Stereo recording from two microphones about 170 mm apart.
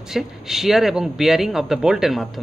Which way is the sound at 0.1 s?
Centre (ahead or behind).